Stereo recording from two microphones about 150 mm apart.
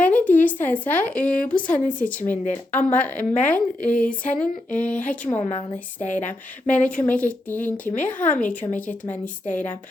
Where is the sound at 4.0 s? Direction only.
60° left (ahead or behind).